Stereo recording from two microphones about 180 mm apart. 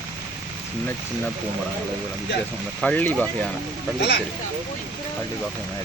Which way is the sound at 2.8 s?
10° left (ahead or behind).